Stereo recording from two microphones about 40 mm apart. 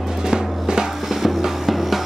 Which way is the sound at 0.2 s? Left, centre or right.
Centre.